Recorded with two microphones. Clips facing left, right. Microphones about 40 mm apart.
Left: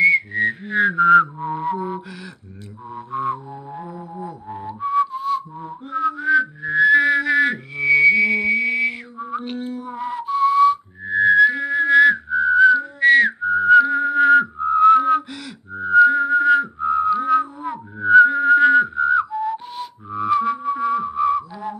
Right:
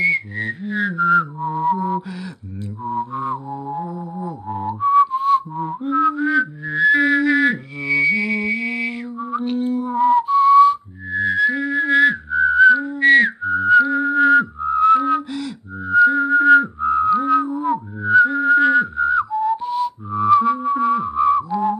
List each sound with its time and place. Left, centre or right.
0.0 s whistling: centre
0.7 s a sound: left
1.6 s music: left
3.1 s music: centre
4.7 s whistling: centre
5.1 s whistling: right
5.6 s music: centre
9.8 s whistling: centre
13.4 s whistling: centre